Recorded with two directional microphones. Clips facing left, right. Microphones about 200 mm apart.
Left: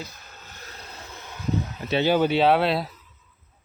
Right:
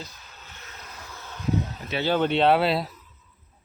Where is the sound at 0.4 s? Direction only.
35° left (ahead or behind); by 1.4 s 20° left (ahead or behind).